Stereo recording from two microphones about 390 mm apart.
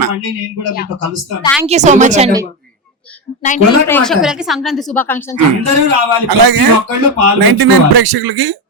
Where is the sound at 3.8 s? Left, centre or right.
Centre.